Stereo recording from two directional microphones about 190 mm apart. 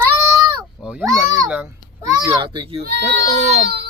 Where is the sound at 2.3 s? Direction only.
25° right (ahead or behind).